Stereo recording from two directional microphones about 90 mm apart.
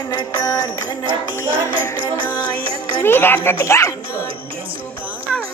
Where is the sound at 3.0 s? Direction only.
25° left (ahead or behind).